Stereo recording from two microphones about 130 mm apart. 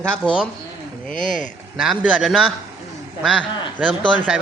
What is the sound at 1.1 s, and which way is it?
Speech, 85° left.